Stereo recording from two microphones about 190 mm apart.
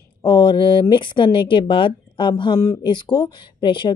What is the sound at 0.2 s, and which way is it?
Speech, 25° left (ahead or behind).